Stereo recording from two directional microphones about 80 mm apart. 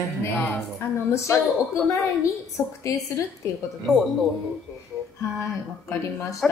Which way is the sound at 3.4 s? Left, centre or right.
Left.